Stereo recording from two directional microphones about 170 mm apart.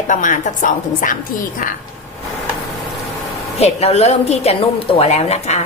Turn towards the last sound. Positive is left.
turn(degrees=40)  # may be behind; listen again after turning